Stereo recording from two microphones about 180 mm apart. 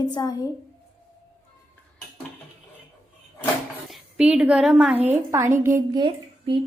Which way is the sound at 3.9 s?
5° right (ahead or behind).